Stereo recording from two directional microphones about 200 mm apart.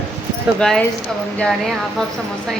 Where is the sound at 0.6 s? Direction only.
5° left (ahead or behind).